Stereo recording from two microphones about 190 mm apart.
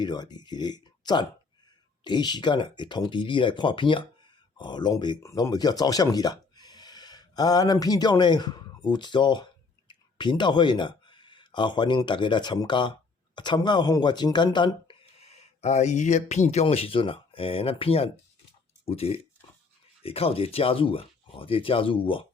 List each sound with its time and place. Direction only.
0.0 s speech: 20° left (ahead or behind)